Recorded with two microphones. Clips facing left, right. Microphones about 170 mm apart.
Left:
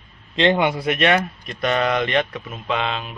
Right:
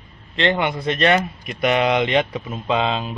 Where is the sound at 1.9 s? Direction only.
20° right (ahead or behind).